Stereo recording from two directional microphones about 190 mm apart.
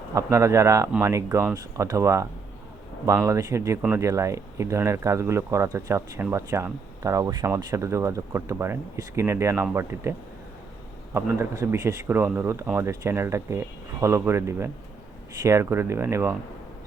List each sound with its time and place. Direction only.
0.1 s speech: 15° right (ahead or behind)